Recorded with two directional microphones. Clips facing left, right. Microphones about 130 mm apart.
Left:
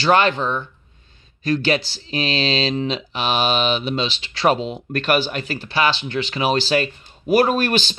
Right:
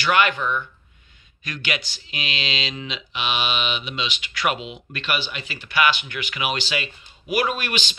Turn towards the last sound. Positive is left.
turn(degrees=40)  # may be behind; listen again after turning